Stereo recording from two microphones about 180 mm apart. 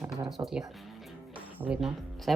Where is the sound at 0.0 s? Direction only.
Centre (ahead or behind).